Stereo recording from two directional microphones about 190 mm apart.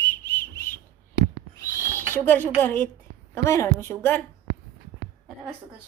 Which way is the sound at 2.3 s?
10° left (ahead or behind).